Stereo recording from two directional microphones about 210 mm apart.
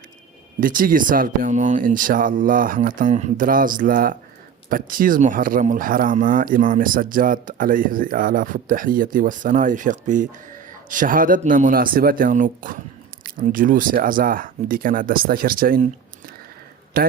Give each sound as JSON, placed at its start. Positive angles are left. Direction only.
{"t": 0.6, "sound": "a man's voice", "side_deg": -40}